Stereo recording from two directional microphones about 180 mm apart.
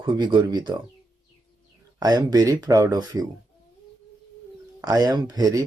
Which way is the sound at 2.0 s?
20° right (ahead or behind).